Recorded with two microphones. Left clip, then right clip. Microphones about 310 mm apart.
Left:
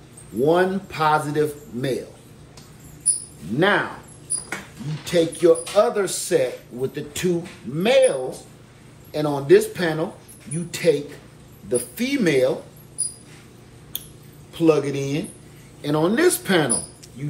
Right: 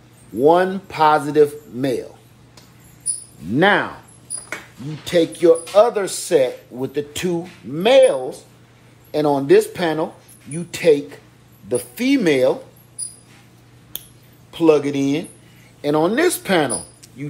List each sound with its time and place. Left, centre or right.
0.4 s speech: right
3.5 s speech: right
5.0 s speech: right
14.5 s speech: centre